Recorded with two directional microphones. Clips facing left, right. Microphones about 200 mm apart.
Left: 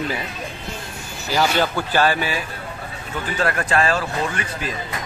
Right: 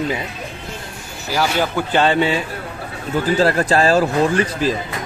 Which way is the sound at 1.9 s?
25° right (ahead or behind).